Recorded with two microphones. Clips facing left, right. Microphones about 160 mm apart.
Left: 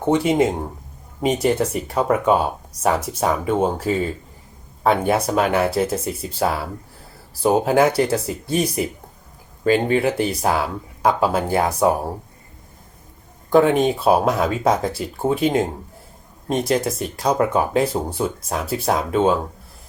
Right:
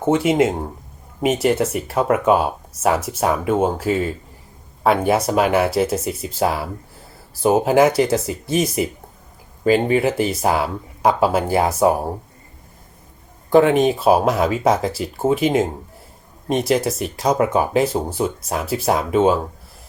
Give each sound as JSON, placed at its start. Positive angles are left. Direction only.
{"t": 0.0, "sound": "speech", "side_deg": -5}
{"t": 13.5, "sound": "speech", "side_deg": -5}